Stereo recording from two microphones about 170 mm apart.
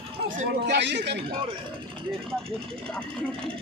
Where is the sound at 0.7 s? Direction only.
90° right.